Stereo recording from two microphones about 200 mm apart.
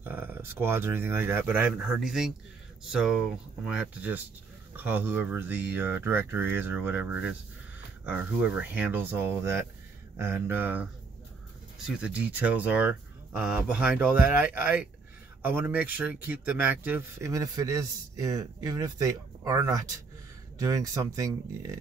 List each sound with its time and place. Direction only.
0.0 s a man's voice: 10° right (ahead or behind)